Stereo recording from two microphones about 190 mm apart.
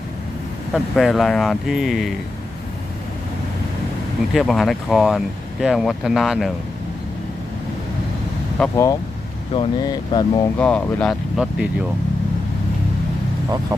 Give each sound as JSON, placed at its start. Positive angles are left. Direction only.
{"t": 0.7, "sound": "speech", "side_deg": 0}
{"t": 4.4, "sound": "speech", "side_deg": 0}
{"t": 8.7, "sound": "speech", "side_deg": 15}
{"t": 10.6, "sound": "speech", "side_deg": 5}